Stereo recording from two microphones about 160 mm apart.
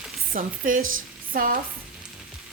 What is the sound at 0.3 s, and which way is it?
Speech, 60° right (ahead or behind).